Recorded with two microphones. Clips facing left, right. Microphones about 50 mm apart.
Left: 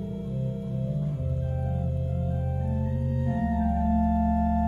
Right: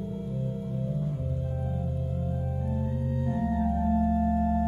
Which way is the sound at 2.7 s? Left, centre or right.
Left.